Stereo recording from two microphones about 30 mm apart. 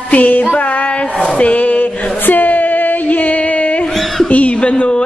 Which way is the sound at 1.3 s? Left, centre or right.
Left.